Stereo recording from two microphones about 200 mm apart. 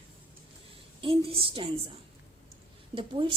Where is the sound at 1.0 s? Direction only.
25° right (ahead or behind).